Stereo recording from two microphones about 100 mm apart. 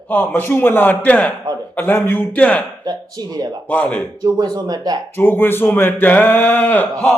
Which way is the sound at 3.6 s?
15° left (ahead or behind).